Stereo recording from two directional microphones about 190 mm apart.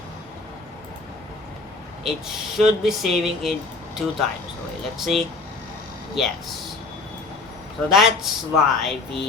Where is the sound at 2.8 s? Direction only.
Centre (ahead or behind).